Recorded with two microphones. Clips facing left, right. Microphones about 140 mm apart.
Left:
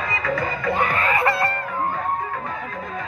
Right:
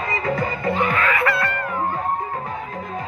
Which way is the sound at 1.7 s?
25° right (ahead or behind).